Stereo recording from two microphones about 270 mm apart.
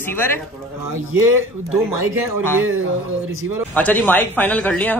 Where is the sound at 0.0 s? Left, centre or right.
Centre.